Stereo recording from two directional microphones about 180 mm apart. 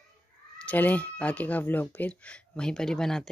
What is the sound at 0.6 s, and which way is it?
A woman's voice, 10° left (ahead or behind).